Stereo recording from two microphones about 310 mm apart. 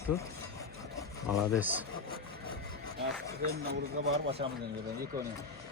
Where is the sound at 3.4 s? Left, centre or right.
Right.